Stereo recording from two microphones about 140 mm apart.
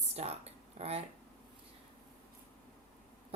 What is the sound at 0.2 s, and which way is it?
Speech, 50° right (ahead or behind).